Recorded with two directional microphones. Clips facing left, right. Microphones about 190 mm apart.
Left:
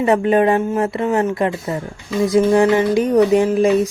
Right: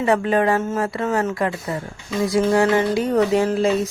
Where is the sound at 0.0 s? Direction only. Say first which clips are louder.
Left 4 dB; 20° left (ahead or behind).